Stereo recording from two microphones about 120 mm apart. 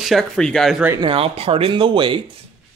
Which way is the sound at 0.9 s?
50° right (ahead or behind).